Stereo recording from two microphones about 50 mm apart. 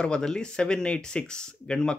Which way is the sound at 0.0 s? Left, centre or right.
Centre.